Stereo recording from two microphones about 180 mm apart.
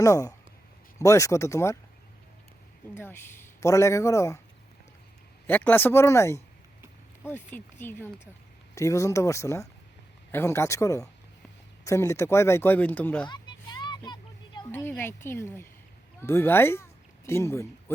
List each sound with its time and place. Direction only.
0.0 s a man's voice: 20° left (ahead or behind)
2.9 s a man's voice: 10° left (ahead or behind)
5.5 s a man's voice: 10° left (ahead or behind)
13.2 s a sound: 25° left (ahead or behind)
14.7 s speech: 10° left (ahead or behind)